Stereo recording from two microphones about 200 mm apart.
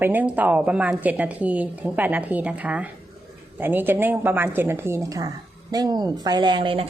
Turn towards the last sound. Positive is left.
turn(degrees=-25)  # may be behind; listen again after turning